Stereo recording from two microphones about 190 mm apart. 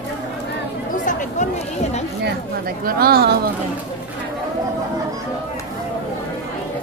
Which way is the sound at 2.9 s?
50° right (ahead or behind).